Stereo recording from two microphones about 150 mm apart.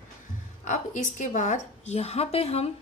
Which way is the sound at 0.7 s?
55° left (ahead or behind).